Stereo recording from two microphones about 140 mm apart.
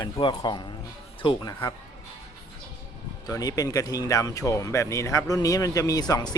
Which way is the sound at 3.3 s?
25° left (ahead or behind).